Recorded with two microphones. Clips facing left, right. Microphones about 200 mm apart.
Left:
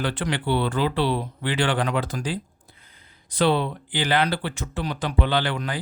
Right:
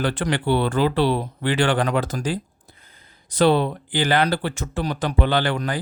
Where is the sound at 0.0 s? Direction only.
45° right (ahead or behind).